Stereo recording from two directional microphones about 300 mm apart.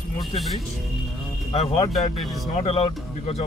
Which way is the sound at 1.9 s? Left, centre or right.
Centre.